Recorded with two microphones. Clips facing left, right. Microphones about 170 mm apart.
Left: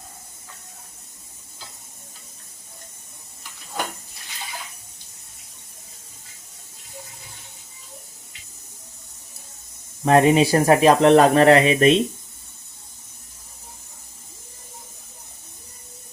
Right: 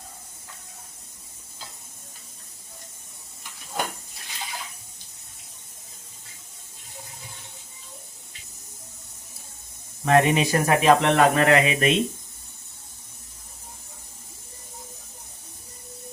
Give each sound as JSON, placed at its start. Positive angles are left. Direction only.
{"t": 10.1, "sound": "speech", "side_deg": 35}